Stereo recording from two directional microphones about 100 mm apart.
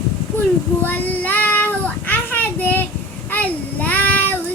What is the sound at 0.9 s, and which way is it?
Child singing, 15° left (ahead or behind).